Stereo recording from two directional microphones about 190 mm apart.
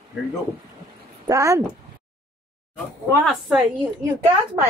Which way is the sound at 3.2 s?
Centre (ahead or behind).